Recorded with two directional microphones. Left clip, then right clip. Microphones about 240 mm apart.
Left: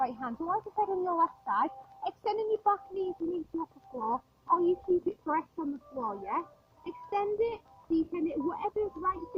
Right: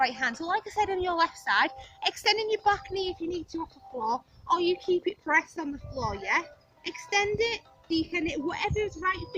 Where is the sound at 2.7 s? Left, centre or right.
Right.